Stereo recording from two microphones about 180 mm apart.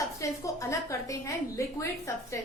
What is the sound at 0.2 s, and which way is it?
A woman's voice, 15° left (ahead or behind).